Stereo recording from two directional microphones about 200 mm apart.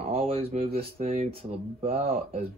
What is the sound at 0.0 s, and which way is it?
Speech, 30° right (ahead or behind).